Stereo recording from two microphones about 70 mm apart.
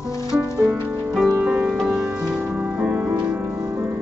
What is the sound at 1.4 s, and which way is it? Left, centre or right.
Music, centre.